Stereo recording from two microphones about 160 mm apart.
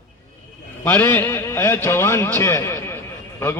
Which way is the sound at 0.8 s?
10° left (ahead or behind).